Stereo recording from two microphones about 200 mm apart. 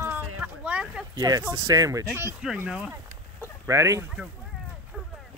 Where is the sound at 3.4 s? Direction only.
15° right (ahead or behind).